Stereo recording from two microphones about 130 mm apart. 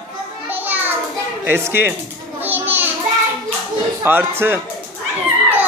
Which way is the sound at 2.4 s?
15° right (ahead or behind).